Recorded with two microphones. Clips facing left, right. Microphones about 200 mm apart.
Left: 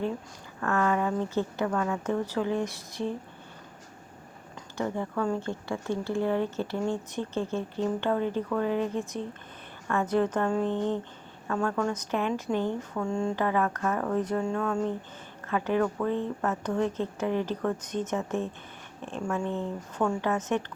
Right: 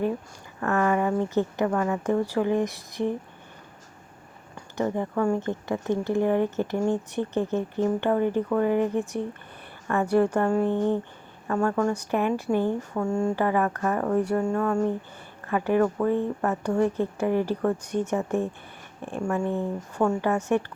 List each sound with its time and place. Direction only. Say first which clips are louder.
0.6 s speech: right 3 dB; 15° right (ahead or behind)
4.5 s speech: right 4 dB; 15° right (ahead or behind)
8.6 s speech: right 5 dB; 55° right (ahead or behind)
8.9 s speech: right 5 dB; 15° right (ahead or behind)